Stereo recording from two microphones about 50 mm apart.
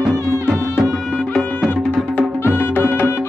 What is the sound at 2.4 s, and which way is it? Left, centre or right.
Music, left.